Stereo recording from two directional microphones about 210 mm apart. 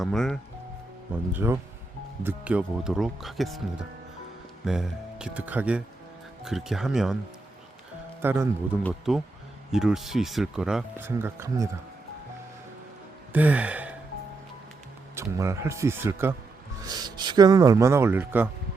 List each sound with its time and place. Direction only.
0.0 s speech: centre (ahead or behind)
1.3 s speech: 10° right (ahead or behind)
4.6 s speech: centre (ahead or behind)
8.2 s speech: 10° right (ahead or behind)
13.3 s sigh: 5° right (ahead or behind)
15.1 s speech: 15° right (ahead or behind)